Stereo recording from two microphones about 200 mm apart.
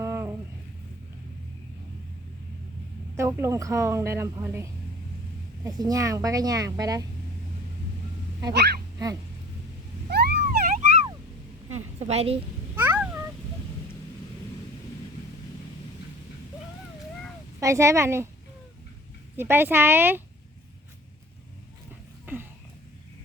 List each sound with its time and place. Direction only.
0.0 s a sound: 15° right (ahead or behind)
3.2 s a woman's voice: 15° right (ahead or behind)
8.5 s speech: 55° right (ahead or behind)
10.1 s vehicle: 55° right (ahead or behind)
11.7 s a sound: 30° right (ahead or behind)
12.7 s cat: 10° right (ahead or behind)
17.6 s a woman's voice: 15° right (ahead or behind)
19.4 s a woman's voice: 10° right (ahead or behind)